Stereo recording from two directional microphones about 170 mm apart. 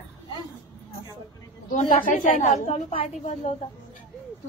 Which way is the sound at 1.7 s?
50° left (ahead or behind).